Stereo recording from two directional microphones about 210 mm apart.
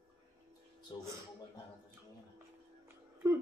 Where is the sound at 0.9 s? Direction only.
20° left (ahead or behind).